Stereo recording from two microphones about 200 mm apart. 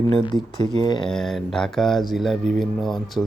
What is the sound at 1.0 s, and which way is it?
Speech, centre (ahead or behind).